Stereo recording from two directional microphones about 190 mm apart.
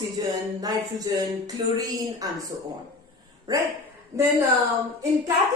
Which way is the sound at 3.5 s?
20° right (ahead or behind).